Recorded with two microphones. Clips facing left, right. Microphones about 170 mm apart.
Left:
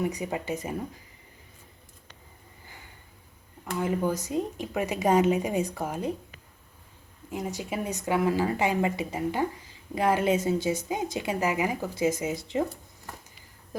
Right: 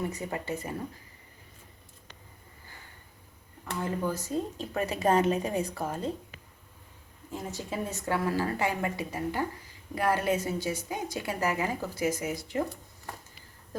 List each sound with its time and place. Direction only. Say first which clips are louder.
0.0 s speech: left 4 dB; 15° left (ahead or behind)
3.8 s speech: left 4 dB; 20° left (ahead or behind)
7.3 s speech: left 4 dB; 15° left (ahead or behind)